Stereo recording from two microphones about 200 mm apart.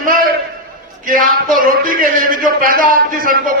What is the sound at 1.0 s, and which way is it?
A man's voice, 40° right (ahead or behind).